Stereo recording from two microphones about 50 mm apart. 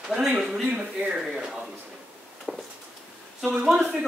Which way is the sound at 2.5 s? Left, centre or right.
Centre.